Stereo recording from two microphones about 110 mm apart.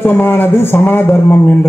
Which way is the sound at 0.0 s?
20° left (ahead or behind).